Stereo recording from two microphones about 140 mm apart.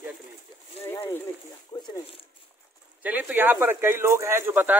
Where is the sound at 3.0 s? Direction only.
10° right (ahead or behind).